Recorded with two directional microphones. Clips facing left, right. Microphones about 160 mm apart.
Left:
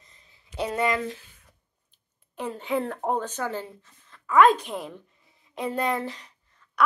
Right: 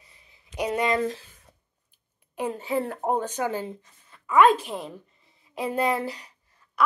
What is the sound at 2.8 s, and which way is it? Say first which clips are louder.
A woman's voice: right 1 dB; 10° right (ahead or behind).